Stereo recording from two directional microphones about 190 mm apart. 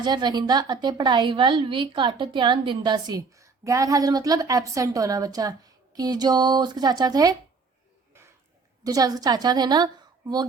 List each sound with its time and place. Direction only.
0.0 s a woman's voice: 20° right (ahead or behind)
8.8 s a woman's voice: 20° right (ahead or behind)